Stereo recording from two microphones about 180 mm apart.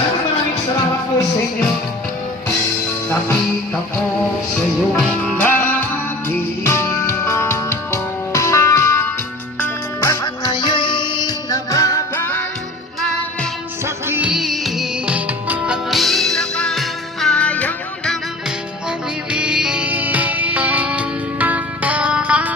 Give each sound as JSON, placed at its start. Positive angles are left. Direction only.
{"t": 4.9, "sound": "music", "side_deg": 5}
{"t": 13.8, "sound": "music", "side_deg": -10}
{"t": 19.3, "sound": "music", "side_deg": -5}